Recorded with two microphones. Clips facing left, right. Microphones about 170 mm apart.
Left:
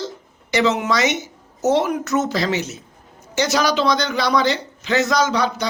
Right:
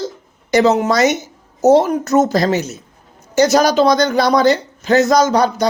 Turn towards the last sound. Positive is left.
turn(degrees=-45)  # may be behind; listen again after turning